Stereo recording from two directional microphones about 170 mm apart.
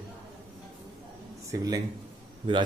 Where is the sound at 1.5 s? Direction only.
20° right (ahead or behind).